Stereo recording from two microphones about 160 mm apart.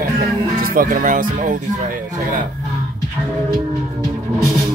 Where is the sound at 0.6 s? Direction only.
60° right (ahead or behind).